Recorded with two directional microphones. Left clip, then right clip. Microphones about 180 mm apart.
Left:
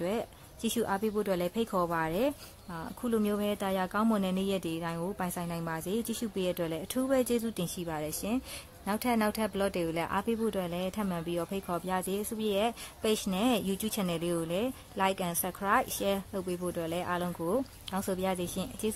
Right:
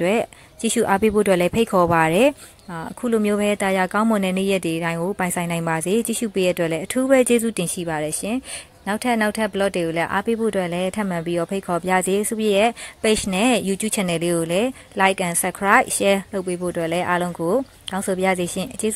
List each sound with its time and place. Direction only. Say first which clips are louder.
0.0 s speech: right 13 dB; 20° right (ahead or behind)